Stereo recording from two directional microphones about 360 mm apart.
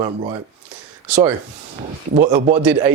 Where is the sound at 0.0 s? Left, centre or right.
Centre.